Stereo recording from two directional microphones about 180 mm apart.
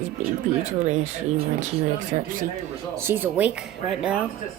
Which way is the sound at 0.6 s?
40° right (ahead or behind).